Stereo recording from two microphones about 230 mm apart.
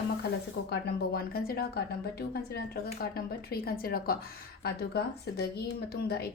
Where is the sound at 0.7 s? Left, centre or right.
Left.